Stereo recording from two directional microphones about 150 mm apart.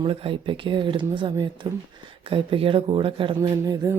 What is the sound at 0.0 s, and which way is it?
Speech, 35° right (ahead or behind).